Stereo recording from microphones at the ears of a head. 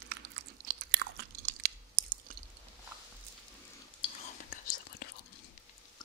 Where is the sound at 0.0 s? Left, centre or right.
Right.